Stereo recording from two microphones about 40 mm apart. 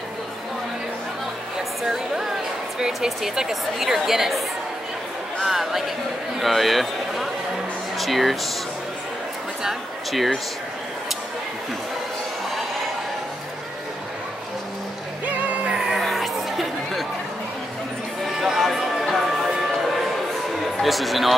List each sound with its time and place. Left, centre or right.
1.8 s a woman's voice: centre
3.3 s a woman's voice: centre
5.5 s a man's voice: centre
10.1 s speech: centre
15.2 s music: right
16.0 s music: centre
18.2 s music: centre
20.8 s speech: centre